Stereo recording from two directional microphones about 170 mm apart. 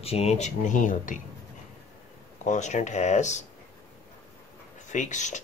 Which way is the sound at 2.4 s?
45° left (ahead or behind).